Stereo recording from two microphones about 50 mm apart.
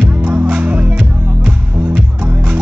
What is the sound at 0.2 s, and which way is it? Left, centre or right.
Music, right.